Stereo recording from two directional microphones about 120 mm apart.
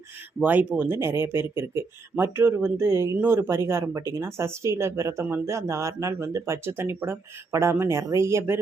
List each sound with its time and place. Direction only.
0.4 s speech: 10° right (ahead or behind)